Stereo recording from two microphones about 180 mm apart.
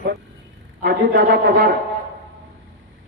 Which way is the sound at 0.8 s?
65° right (ahead or behind).